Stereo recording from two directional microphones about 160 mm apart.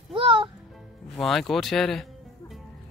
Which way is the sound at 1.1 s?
5° left (ahead or behind).